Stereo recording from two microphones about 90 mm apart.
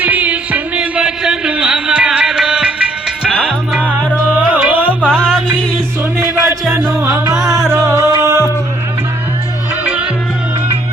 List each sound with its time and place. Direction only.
0.0 s a sound: 20° right (ahead or behind)
4.3 s music: 15° right (ahead or behind)
5.0 s music: 10° left (ahead or behind)
6.1 s music: 35° right (ahead or behind)